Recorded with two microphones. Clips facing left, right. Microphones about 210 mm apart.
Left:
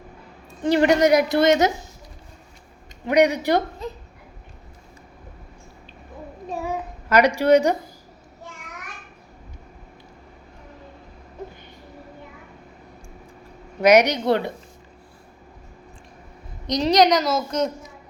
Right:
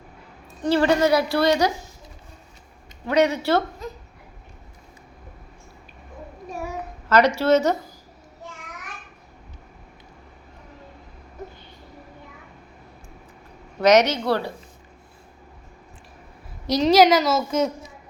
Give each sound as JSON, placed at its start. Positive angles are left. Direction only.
{"t": 0.6, "sound": "a woman's voice", "side_deg": 20}
{"t": 3.1, "sound": "a woman's voice", "side_deg": 15}
{"t": 7.1, "sound": "a woman's voice", "side_deg": 15}
{"t": 13.8, "sound": "a woman's voice", "side_deg": 10}
{"t": 16.6, "sound": "a woman's voice", "side_deg": -5}